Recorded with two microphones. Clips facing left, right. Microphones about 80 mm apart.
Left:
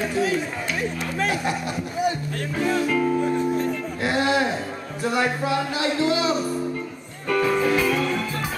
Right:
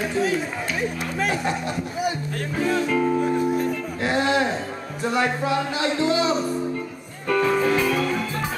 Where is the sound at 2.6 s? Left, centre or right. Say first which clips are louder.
Even; centre.